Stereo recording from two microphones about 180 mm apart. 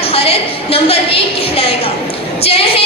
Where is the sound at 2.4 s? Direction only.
35° left (ahead or behind).